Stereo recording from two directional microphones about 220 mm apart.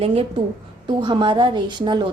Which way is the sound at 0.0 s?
25° right (ahead or behind).